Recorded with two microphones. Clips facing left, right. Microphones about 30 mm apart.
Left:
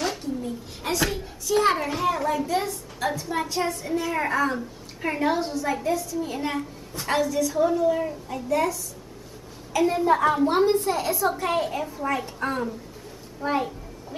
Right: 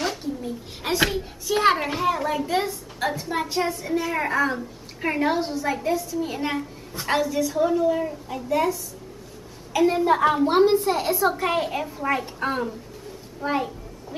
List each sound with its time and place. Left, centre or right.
0.2 s a sound: centre
1.5 s a child's voice: right
2.0 s a woman's voice: centre
2.7 s a woman's voice: centre
8.5 s a woman's voice: centre
13.4 s a sound: centre